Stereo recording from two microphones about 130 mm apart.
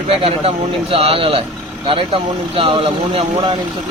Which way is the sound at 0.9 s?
45° right (ahead or behind).